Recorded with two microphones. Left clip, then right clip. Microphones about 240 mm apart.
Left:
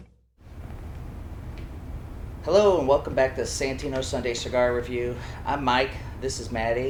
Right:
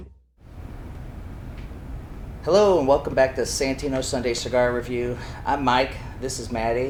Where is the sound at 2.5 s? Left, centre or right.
Right.